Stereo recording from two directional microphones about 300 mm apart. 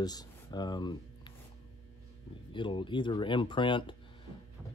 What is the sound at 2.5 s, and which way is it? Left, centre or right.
Speech, centre.